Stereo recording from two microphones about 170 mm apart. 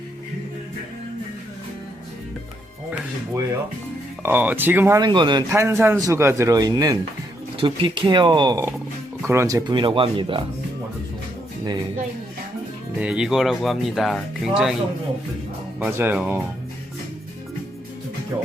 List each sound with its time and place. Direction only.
4.2 s speech: 10° right (ahead or behind); by 5.5 s 25° right (ahead or behind)
5.5 s speech: 15° right (ahead or behind); by 10.4 s 30° right (ahead or behind)
13.0 s speech: 5° right (ahead or behind)
15.8 s speech: 10° right (ahead or behind)